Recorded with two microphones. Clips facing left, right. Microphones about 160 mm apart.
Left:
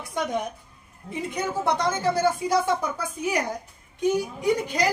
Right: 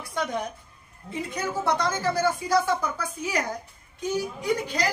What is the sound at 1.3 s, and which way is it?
Speech, 20° left (ahead or behind).